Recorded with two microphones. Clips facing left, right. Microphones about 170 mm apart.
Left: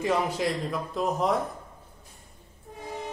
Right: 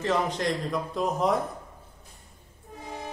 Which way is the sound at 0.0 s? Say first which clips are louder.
Even; 10° left (ahead or behind).